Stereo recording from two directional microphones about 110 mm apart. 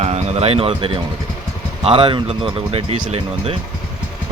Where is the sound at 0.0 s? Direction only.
80° right; by 3.6 s 60° right (ahead or behind).